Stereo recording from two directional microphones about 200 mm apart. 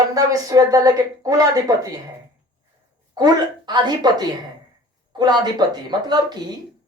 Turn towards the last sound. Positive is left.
turn(degrees=-20)  # may be behind; listen again after turning